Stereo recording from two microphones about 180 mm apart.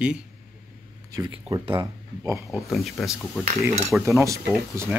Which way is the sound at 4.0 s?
15° right (ahead or behind).